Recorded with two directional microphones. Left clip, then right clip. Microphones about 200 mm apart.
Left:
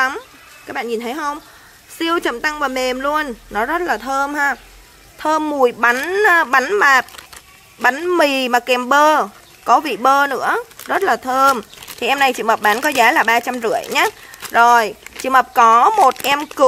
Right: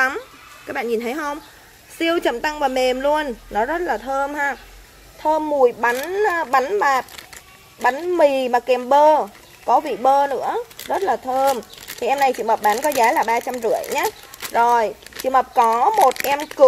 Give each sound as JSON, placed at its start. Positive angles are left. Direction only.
{"t": 0.7, "sound": "speech", "side_deg": 10}
{"t": 15.9, "sound": "speech", "side_deg": 60}